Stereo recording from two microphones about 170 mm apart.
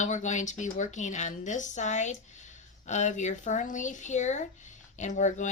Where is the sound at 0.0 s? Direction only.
45° left (ahead or behind).